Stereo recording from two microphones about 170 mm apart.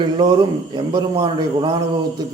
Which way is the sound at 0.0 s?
25° right (ahead or behind).